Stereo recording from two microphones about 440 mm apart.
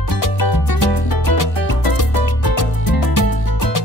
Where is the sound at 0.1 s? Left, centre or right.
Left.